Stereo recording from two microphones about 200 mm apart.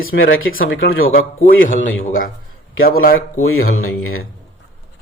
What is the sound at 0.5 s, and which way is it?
Speech, 45° left (ahead or behind).